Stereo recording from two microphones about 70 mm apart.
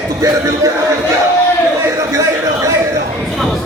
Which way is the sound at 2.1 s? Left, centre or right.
Right.